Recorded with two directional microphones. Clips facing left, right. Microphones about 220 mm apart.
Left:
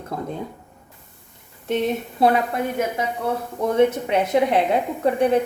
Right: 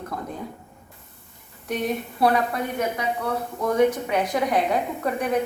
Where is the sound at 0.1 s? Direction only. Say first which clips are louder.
Left 5 dB; 25° left (ahead or behind).